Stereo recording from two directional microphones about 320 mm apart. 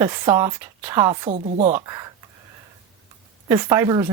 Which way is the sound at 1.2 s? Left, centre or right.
Right.